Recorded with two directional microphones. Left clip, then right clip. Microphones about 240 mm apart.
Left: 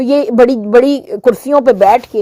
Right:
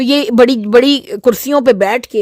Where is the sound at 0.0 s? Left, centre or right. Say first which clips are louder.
Left 1 dB; right.